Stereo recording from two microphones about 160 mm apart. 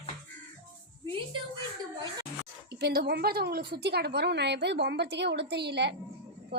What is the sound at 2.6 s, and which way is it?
A woman's voice, 85° right.